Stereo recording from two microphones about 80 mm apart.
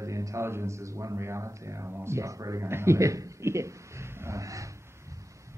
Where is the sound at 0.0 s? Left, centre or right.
Right.